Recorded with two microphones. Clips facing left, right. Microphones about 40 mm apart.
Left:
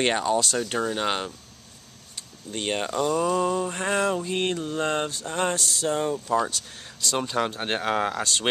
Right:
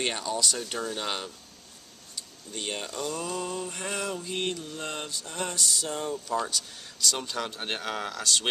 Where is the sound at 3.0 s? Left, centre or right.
Centre.